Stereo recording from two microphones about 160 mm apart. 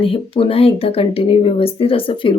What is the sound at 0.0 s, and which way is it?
Speech, 35° left (ahead or behind).